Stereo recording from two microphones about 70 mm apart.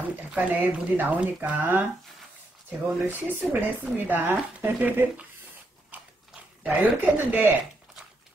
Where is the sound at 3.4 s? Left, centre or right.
Right.